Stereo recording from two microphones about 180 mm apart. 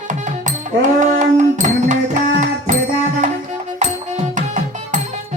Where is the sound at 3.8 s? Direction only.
40° right (ahead or behind).